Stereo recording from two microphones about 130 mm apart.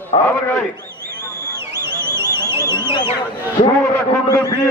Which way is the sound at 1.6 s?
20° right (ahead or behind).